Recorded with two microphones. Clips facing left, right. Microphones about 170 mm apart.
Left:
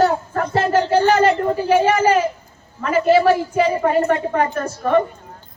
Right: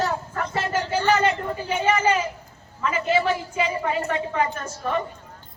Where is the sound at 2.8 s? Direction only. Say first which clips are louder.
Left 8 dB; 40° left (ahead or behind).